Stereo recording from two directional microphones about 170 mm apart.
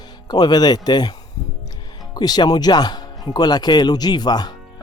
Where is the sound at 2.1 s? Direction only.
25° left (ahead or behind).